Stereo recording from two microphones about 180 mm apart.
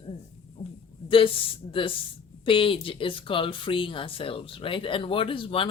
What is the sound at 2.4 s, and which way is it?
Speech, 30° left (ahead or behind).